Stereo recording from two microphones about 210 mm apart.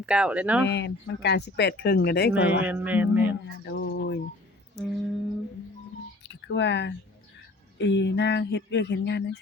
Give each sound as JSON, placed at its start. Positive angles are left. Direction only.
{"t": 0.0, "sound": "speech", "side_deg": -5}
{"t": 0.6, "sound": "speech", "side_deg": 55}
{"t": 2.6, "sound": "speech", "side_deg": -10}
{"t": 3.4, "sound": "speech", "side_deg": 55}
{"t": 4.8, "sound": "speech", "side_deg": 0}
{"t": 6.2, "sound": "speech", "side_deg": 55}